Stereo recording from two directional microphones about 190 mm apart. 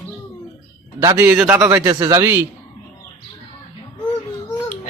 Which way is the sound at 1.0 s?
15° right (ahead or behind).